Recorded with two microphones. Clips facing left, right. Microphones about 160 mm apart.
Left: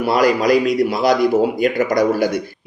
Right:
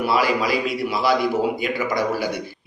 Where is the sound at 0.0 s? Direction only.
45° left (ahead or behind).